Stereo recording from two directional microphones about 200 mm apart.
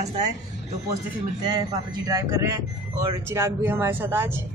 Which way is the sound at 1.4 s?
20° right (ahead or behind).